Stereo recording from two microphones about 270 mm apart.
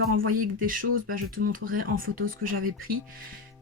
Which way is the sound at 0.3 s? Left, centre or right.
Right.